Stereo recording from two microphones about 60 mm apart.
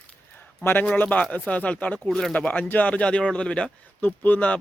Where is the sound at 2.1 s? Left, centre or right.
Centre.